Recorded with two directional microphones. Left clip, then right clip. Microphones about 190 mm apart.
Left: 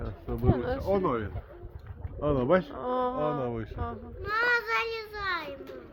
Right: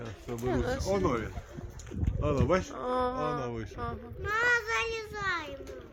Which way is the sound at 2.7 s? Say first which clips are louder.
Left 1 dB; 5° right (ahead or behind).